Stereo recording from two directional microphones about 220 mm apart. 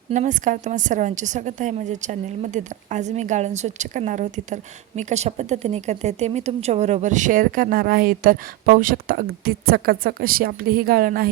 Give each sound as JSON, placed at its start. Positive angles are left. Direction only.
{"t": 0.1, "sound": "a woman's voice", "side_deg": -35}